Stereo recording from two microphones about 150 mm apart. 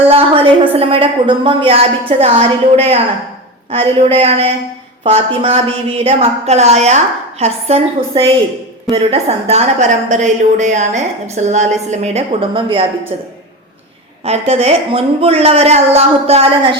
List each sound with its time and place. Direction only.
0.1 s a woman's voice: 40° right (ahead or behind)
14.3 s a woman's voice: 40° right (ahead or behind)